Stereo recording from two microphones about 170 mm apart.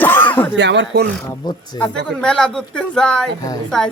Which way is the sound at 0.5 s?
90° right.